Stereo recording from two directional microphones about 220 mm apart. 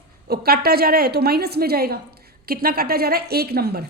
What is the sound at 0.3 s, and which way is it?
A woman's voice, 45° right (ahead or behind).